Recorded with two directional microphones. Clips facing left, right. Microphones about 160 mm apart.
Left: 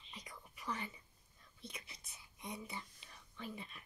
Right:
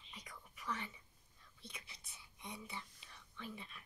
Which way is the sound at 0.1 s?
35° left (ahead or behind).